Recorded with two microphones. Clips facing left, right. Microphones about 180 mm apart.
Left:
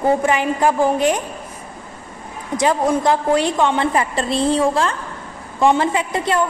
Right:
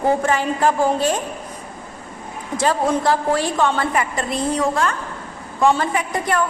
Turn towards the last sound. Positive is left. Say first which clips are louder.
# left 2 dB
turn(degrees=25)  # may be behind; listen again after turning